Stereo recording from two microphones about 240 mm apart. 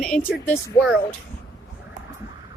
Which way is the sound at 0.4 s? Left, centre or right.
Centre.